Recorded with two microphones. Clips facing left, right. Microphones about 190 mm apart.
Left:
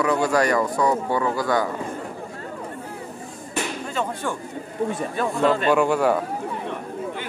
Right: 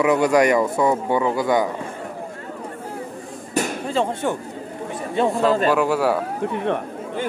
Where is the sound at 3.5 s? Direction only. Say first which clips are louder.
Right 5 dB; 40° right (ahead or behind).